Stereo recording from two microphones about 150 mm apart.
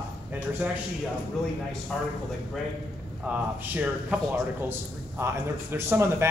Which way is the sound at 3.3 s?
10° right (ahead or behind).